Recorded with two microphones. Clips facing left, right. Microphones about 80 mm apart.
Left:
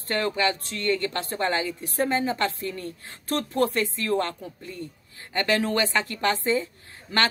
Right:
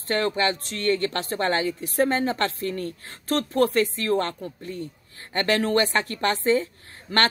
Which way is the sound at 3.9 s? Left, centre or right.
Right.